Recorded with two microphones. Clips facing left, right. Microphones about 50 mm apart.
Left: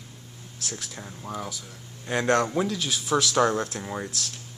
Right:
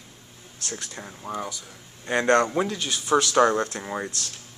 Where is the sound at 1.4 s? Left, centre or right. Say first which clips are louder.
Right 2 dB; centre.